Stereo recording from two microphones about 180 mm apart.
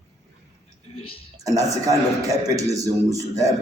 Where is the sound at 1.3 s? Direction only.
20° right (ahead or behind).